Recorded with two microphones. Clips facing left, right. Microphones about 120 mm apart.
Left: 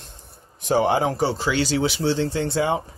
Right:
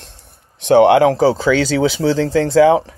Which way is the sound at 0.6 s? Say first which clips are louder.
Right 10 dB; 75° right (ahead or behind).